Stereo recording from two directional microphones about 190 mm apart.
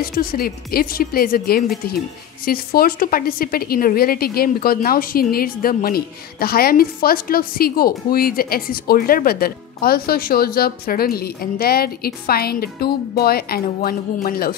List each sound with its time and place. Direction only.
0.0 s a woman's voice: 50° left (ahead or behind)